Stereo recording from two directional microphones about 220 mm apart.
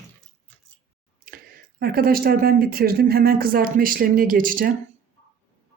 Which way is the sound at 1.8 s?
40° right (ahead or behind).